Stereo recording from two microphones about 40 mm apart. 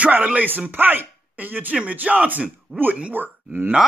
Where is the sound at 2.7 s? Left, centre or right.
Centre.